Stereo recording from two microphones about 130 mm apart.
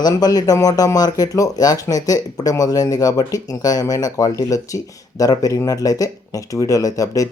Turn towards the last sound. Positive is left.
turn(degrees=25)  # may be behind; listen again after turning